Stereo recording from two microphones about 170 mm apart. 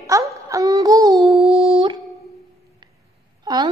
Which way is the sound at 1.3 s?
35° right (ahead or behind).